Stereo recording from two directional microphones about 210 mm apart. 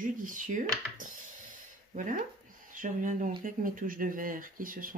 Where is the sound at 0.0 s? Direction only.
40° right (ahead or behind).